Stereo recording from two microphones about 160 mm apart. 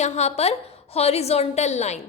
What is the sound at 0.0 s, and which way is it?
A woman's voice, 45° left (ahead or behind).